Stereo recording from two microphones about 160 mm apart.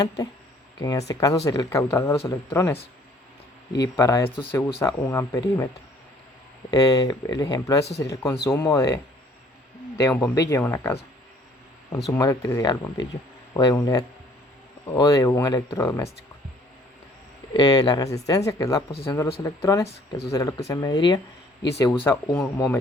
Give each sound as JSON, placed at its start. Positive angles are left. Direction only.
{"t": 0.8, "sound": "speech", "side_deg": 20}
{"t": 3.8, "sound": "speech", "side_deg": 20}
{"t": 6.7, "sound": "speech", "side_deg": 25}
{"t": 7.9, "sound": "speech", "side_deg": 90}
{"t": 8.1, "sound": "speech", "side_deg": 20}
{"t": 10.0, "sound": "speech", "side_deg": 15}
{"t": 12.1, "sound": "speech", "side_deg": 20}
{"t": 17.5, "sound": "speech", "side_deg": 25}
{"t": 22.0, "sound": "speech", "side_deg": 10}